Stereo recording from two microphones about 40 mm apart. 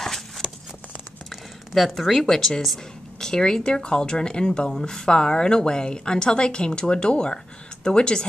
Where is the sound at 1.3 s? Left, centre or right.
Centre.